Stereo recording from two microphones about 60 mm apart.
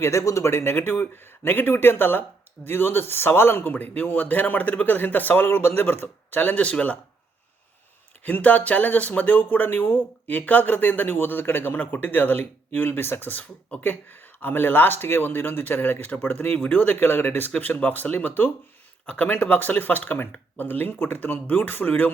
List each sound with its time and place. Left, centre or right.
0.0 s speech: left
6.7 s speech: centre
8.2 s speech: left
19.0 s speech: left